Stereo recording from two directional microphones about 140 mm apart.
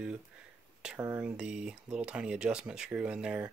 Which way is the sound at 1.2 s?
5° right (ahead or behind).